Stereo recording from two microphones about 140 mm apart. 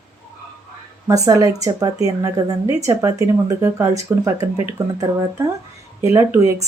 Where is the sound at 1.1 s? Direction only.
25° right (ahead or behind).